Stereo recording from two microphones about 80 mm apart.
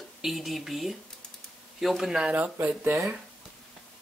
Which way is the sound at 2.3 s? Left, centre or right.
Right.